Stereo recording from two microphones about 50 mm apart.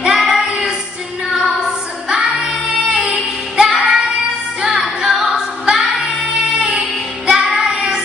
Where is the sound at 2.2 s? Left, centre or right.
Right.